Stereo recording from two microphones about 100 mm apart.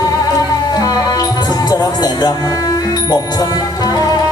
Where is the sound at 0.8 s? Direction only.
40° left (ahead or behind).